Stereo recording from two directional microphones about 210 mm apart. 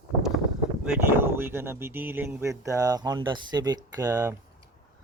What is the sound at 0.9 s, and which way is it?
Speech, 10° right (ahead or behind).